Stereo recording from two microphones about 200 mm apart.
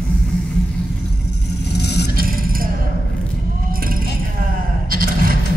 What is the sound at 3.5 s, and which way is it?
Vehicle, 45° right (ahead or behind).